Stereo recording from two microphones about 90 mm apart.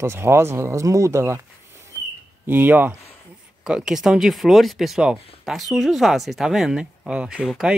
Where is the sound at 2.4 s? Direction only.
20° right (ahead or behind).